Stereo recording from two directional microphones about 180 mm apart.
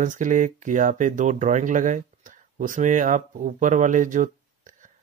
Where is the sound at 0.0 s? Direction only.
45° right (ahead or behind).